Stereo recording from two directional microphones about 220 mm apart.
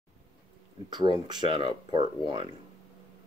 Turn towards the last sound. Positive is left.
turn(degrees=-20)  # may be behind; listen again after turning